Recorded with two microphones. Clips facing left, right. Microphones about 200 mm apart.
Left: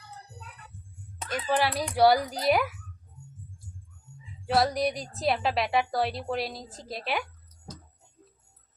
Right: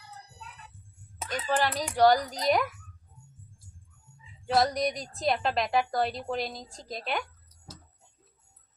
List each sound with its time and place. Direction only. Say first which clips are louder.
1.2 s a woman's voice: left 1 dB; centre (ahead or behind)
4.4 s a woman's voice: left 1 dB; centre (ahead or behind)